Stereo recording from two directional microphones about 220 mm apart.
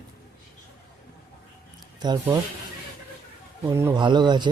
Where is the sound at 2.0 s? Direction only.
20° right (ahead or behind).